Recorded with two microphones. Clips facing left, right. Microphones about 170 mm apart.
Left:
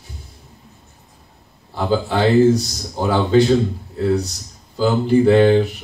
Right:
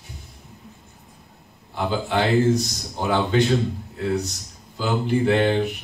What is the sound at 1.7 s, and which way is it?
A man's voice, 35° left (ahead or behind).